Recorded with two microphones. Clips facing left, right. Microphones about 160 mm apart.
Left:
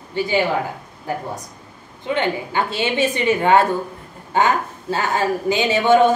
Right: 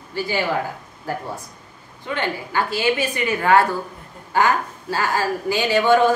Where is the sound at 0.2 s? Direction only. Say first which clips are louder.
Left 3 dB; 20° left (ahead or behind).